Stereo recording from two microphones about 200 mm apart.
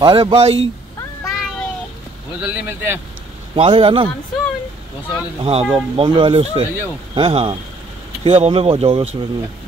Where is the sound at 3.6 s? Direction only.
25° right (ahead or behind).